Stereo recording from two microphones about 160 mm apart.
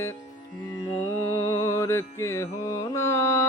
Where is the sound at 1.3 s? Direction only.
20° left (ahead or behind).